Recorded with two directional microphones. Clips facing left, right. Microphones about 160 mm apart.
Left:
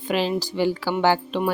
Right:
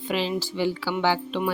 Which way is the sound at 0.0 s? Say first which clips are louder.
Left 3 dB; 45° left (ahead or behind).